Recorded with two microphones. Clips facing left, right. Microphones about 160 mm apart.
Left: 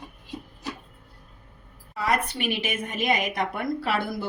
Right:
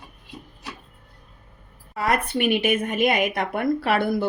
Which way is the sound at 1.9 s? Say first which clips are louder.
Right 3 dB; 55° right (ahead or behind).